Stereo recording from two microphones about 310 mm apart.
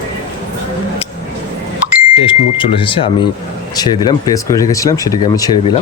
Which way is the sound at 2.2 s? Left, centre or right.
Centre.